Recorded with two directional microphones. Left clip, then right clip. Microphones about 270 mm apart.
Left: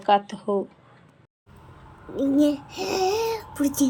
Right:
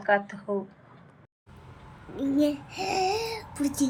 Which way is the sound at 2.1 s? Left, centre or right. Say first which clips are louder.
Left 5 dB; centre.